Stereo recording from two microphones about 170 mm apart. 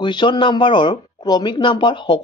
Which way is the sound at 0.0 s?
30° left (ahead or behind).